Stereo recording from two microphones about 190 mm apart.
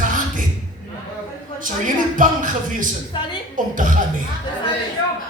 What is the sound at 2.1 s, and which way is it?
Speech, 45° right (ahead or behind).